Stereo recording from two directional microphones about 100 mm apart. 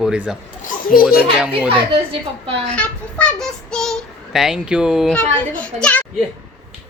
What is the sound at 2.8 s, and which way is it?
A child's voice, 10° left (ahead or behind).